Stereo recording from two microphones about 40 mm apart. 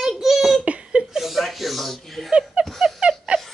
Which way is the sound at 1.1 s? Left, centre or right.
Centre.